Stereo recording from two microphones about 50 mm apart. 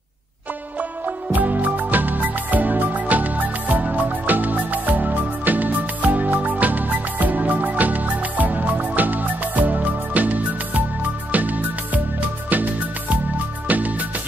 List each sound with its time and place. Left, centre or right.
0.7 s music: right